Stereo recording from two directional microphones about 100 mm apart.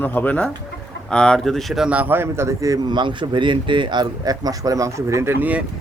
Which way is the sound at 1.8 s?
15° right (ahead or behind).